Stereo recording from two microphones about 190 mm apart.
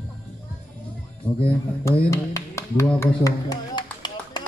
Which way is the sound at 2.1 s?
15° left (ahead or behind).